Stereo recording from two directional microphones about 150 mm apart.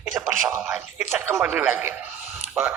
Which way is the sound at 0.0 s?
5° right (ahead or behind).